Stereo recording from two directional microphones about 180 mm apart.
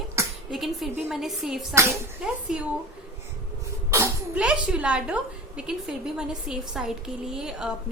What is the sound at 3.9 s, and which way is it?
A woman's voice, 10° right (ahead or behind).